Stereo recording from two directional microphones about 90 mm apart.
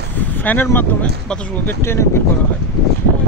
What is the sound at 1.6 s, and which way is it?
Speech, 30° left (ahead or behind).